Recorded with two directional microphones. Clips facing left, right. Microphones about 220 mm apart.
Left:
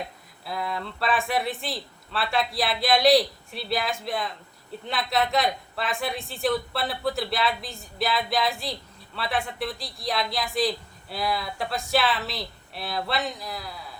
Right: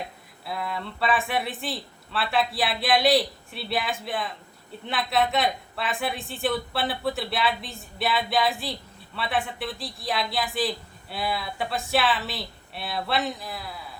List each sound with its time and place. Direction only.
0.4 s speech: centre (ahead or behind)